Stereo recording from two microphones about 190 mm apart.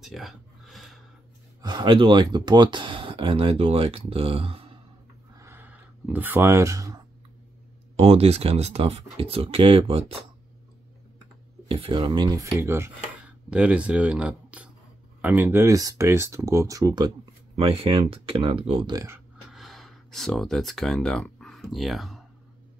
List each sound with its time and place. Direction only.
0.0 s a sound: centre (ahead or behind)
1.6 s speech: 25° right (ahead or behind)
5.4 s a sound: 10° right (ahead or behind)
7.9 s speech: 30° right (ahead or behind)
11.6 s speech: 30° right (ahead or behind)
17.6 s speech: 30° right (ahead or behind)
19.5 s speech: centre (ahead or behind)